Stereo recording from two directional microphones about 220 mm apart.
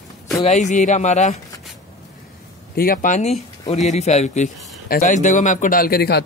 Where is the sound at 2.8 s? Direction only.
40° left (ahead or behind).